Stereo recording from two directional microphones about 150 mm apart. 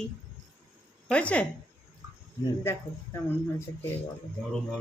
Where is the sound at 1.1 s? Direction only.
10° left (ahead or behind).